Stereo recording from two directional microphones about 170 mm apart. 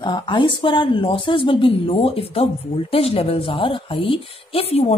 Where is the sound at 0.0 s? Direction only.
30° left (ahead or behind).